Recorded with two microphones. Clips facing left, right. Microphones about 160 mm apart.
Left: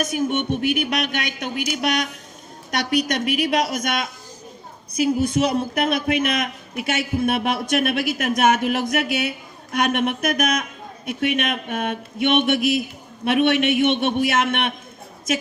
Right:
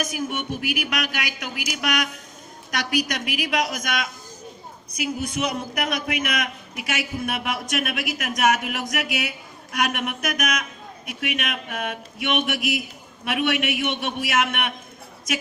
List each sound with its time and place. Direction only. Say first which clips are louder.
0.0 s a man's voice: left 6 dB; 25° left (ahead or behind)